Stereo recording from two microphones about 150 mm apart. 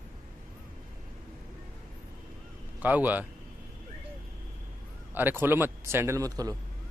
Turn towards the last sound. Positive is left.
turn(degrees=-25)  # may be behind; listen again after turning